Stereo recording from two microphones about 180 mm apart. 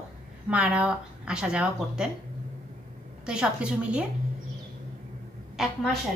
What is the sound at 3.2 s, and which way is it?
Speech, 5° right (ahead or behind).